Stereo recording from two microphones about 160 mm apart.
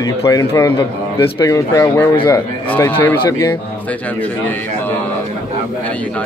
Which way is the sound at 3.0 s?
15° left (ahead or behind).